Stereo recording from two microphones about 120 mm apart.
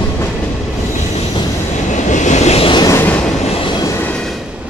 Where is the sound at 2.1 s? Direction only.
85° left; by 2.6 s 65° left (ahead or behind).